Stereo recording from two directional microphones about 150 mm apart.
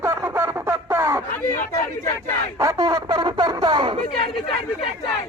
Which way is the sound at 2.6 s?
25° right (ahead or behind).